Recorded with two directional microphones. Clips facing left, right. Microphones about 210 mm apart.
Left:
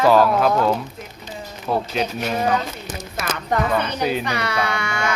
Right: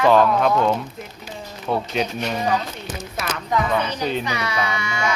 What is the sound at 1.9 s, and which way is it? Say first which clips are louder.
Speech: left 1 dB; 5° left (ahead or behind).